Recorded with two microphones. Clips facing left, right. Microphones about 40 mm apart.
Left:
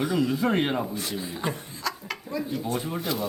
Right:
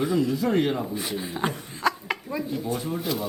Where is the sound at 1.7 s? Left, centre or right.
Right.